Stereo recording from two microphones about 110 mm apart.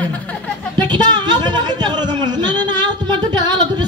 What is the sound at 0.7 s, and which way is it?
Speech, 40° right (ahead or behind).